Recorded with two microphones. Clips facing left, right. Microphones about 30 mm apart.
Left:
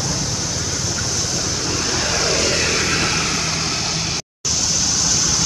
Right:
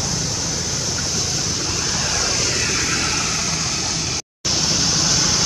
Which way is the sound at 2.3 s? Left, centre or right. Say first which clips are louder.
Left 3 dB; left.